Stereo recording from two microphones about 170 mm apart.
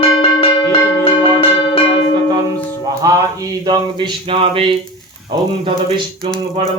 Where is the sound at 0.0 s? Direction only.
30° left (ahead or behind).